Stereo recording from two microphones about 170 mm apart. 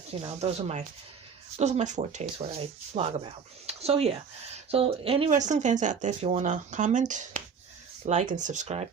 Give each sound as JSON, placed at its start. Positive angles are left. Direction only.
{"t": 0.1, "sound": "speech", "side_deg": -35}
{"t": 5.3, "sound": "speech", "side_deg": -45}